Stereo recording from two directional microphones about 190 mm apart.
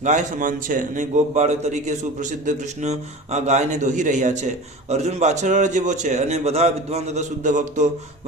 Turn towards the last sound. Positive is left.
turn(degrees=-40)  # may be behind; listen again after turning